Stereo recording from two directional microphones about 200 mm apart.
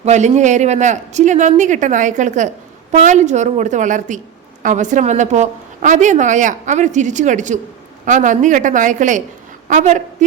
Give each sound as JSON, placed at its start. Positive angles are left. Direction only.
{"t": 0.0, "sound": "a woman's voice", "side_deg": -35}